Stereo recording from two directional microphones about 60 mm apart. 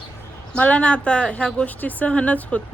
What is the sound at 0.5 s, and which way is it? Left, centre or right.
Speech, left.